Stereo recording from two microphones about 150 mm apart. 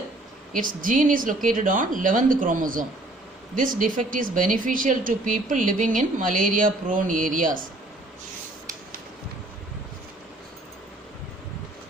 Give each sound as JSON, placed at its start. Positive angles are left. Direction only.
{"t": 0.5, "sound": "speech", "side_deg": -65}